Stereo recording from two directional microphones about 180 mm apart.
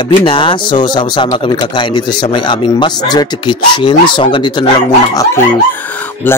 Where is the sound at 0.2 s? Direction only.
30° left (ahead or behind).